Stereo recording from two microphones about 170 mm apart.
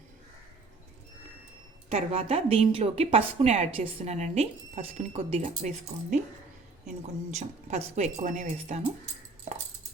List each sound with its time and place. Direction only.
1.9 s speech: 35° right (ahead or behind)
7.3 s speech: 40° right (ahead or behind)